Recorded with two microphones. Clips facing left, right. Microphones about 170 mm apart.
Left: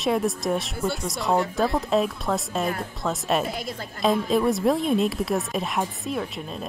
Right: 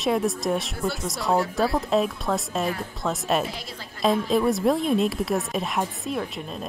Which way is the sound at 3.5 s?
50° left (ahead or behind).